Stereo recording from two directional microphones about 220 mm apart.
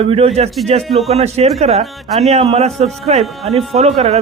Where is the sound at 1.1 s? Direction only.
25° right (ahead or behind).